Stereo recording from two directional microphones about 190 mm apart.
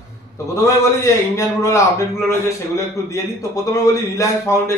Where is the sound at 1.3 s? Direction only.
15° left (ahead or behind).